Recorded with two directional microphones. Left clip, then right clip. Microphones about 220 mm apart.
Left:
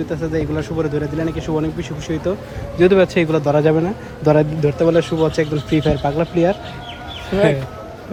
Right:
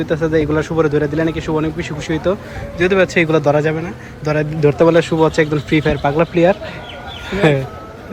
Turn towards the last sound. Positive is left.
turn(degrees=0)  # may be behind; listen again after turning